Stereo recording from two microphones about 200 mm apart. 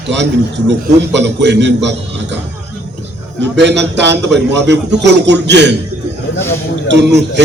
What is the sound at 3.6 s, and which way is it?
A man's voice, 60° right (ahead or behind).